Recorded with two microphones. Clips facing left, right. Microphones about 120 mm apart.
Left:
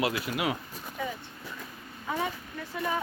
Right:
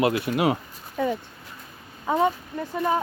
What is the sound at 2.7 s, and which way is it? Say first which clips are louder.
Speech: right 7 dB; 50° right (ahead or behind).